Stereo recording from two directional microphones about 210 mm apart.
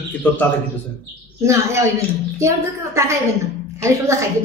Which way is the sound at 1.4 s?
15° right (ahead or behind).